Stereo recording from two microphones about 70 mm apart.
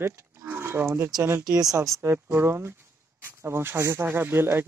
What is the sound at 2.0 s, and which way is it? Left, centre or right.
Speech, right.